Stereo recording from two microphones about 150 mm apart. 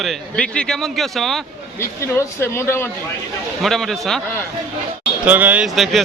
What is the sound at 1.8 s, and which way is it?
Speech, 15° left (ahead or behind).